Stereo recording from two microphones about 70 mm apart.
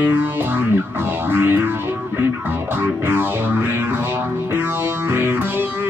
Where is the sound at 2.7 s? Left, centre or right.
Right.